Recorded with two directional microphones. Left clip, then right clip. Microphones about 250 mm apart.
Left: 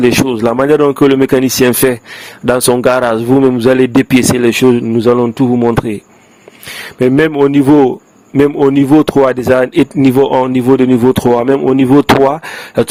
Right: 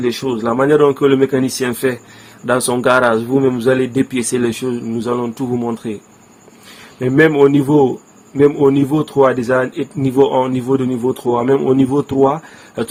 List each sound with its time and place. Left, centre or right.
0.0 s a man's voice: left
7.2 s a man's voice: left